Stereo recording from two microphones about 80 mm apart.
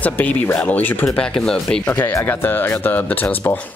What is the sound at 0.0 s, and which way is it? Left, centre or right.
Speech, left.